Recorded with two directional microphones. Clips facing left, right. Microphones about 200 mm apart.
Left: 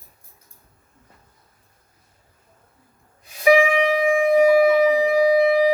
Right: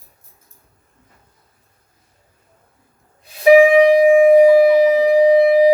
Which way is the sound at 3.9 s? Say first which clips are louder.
Right 6 dB; 35° right (ahead or behind).